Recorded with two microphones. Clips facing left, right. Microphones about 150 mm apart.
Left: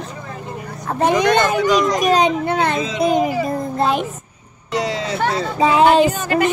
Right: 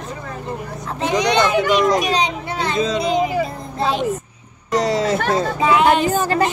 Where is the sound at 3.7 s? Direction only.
50° left (ahead or behind).